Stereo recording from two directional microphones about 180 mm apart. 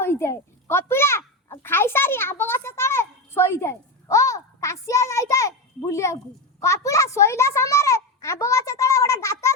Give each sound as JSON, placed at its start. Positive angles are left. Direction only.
{"t": 0.0, "sound": "a child's voice", "side_deg": 15}